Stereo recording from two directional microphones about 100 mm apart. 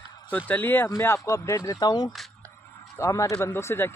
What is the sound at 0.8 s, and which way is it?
Speech, 30° left (ahead or behind).